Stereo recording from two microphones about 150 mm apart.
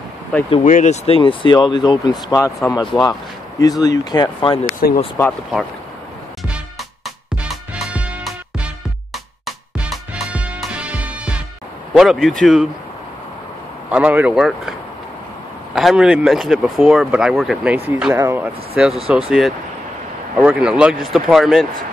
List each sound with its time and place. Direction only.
0.7 s speech: 60° left (ahead or behind)
1.0 s speech: 35° left (ahead or behind)
4.6 s speech: 65° left (ahead or behind)
7.4 s music: 5° right (ahead or behind)
9.8 s music: 5° right (ahead or behind)
11.9 s speech: 5° right (ahead or behind)
13.8 s speech: 10° right (ahead or behind)
19.0 s speech: 5° right (ahead or behind)